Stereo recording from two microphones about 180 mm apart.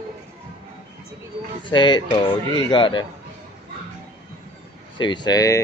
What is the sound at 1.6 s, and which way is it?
Speech, 25° left (ahead or behind).